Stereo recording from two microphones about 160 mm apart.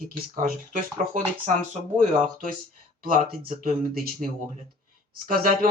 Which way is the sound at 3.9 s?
70° right (ahead or behind).